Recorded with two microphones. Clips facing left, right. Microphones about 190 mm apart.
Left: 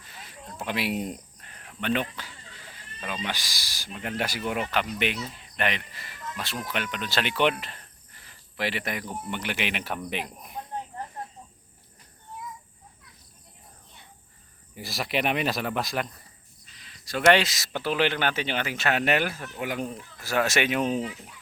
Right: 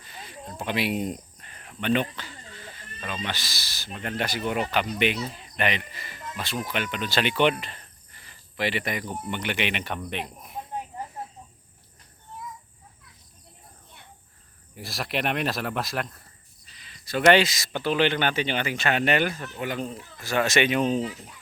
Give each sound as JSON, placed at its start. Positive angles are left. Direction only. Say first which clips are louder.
{"t": 0.0, "sound": "a sound", "louder": "right 4 dB", "side_deg": 0}
{"t": 0.6, "sound": "speech", "louder": "right 2 dB", "side_deg": 0}
{"t": 10.8, "sound": "snake", "louder": "right 1 dB", "side_deg": -5}
{"t": 14.8, "sound": "speech", "louder": "left 1 dB", "side_deg": 0}